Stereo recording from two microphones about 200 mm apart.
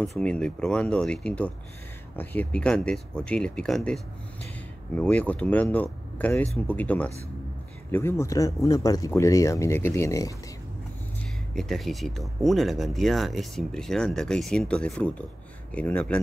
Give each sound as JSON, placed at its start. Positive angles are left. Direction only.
{"t": 0.2, "sound": "speech", "side_deg": 5}
{"t": 11.5, "sound": "speech", "side_deg": 0}